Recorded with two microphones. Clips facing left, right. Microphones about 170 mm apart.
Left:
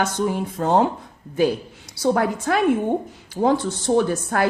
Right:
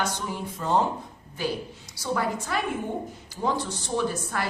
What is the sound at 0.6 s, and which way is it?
Speech, 70° left (ahead or behind).